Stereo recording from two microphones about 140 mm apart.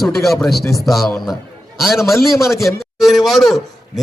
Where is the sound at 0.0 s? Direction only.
Centre (ahead or behind).